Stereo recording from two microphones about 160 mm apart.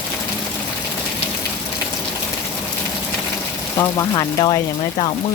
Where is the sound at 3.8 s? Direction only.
20° left (ahead or behind).